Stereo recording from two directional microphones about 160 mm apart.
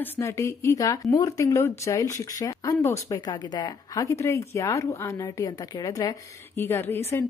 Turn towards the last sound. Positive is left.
turn(degrees=15)  # may be behind; listen again after turning